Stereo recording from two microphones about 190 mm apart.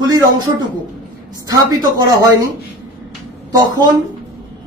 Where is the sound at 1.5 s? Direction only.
20° right (ahead or behind).